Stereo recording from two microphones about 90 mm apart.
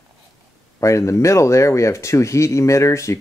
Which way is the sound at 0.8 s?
35° left (ahead or behind).